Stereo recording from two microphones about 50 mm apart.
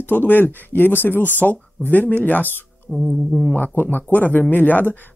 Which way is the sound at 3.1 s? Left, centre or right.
Centre.